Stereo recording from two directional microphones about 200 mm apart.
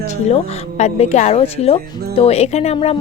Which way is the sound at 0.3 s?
35° left (ahead or behind).